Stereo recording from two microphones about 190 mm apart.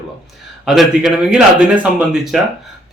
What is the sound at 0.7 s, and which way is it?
Speech, centre (ahead or behind).